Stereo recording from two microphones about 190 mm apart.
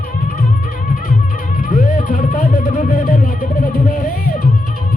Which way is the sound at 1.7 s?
45° left (ahead or behind).